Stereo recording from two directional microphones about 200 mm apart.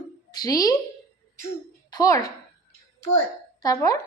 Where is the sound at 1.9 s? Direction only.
20° left (ahead or behind).